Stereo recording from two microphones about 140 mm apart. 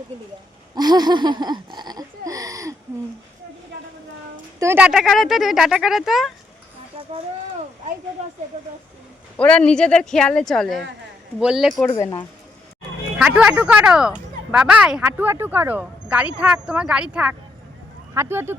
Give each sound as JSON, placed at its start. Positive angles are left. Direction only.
{"t": 0.8, "sound": "a sound", "side_deg": -30}
{"t": 4.8, "sound": "speech", "side_deg": -5}
{"t": 8.2, "sound": "speech", "side_deg": -50}
{"t": 9.4, "sound": "speech", "side_deg": 10}
{"t": 11.9, "sound": "speech", "side_deg": 45}
{"t": 13.1, "sound": "speech", "side_deg": -5}